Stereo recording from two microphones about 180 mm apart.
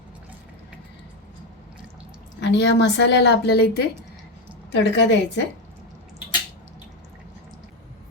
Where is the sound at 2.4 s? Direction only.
75° left (ahead or behind).